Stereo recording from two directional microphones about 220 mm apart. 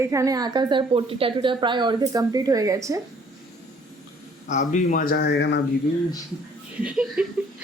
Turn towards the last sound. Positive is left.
turn(degrees=-5)  # may be behind; listen again after turning